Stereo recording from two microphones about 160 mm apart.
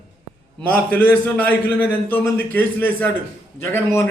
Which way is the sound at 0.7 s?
10° left (ahead or behind).